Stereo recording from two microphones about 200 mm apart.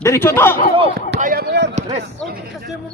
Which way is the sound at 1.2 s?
45° right (ahead or behind).